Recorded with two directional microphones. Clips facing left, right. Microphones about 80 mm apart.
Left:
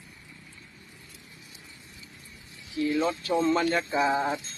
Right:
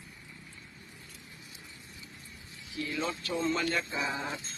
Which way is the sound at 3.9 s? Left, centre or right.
Left.